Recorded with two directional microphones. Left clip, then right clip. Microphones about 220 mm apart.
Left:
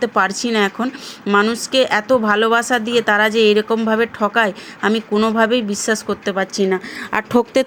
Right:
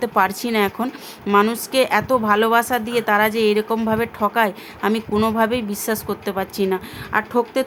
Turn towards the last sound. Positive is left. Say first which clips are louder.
# left 3 dB
turn(degrees=30)  # may be behind; listen again after turning